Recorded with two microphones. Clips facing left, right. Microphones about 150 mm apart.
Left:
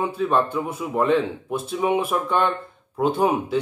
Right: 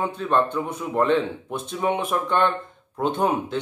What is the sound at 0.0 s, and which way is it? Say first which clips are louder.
Speech: left 1 dB; 10° left (ahead or behind).